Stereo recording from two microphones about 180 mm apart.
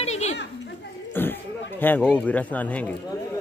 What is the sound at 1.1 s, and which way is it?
Speech, 10° left (ahead or behind).